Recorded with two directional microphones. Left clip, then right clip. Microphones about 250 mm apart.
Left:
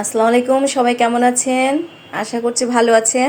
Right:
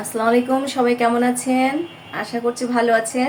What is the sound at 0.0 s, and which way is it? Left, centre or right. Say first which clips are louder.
A woman's voice: left 4 dB; left.